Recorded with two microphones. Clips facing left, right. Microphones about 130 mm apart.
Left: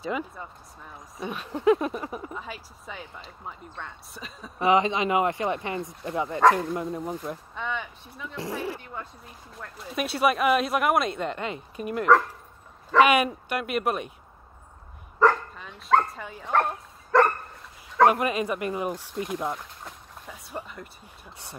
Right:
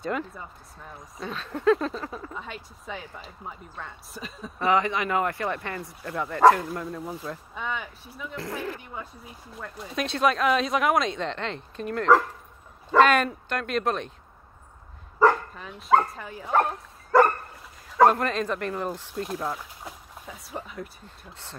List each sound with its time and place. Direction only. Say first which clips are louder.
0.0 s speech: even; 5° left (ahead or behind)
2.3 s speech: even; 5° left (ahead or behind)
4.6 s speech: left 2 dB; 20° left (ahead or behind)
7.5 s speech: even; 5° right (ahead or behind)
8.4 s speech: left 2 dB; 15° left (ahead or behind)
8.9 s speech: even; 5° right (ahead or behind)
15.1 s speech: right 1 dB; 5° right (ahead or behind)
17.9 s speech: right 1 dB; 5° left (ahead or behind)
19.2 s pour: left 1 dB; centre (ahead or behind)
21.0 s speech: even; 15° left (ahead or behind)